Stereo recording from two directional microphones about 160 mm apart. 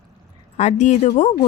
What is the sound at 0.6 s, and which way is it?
Speech, 45° left (ahead or behind).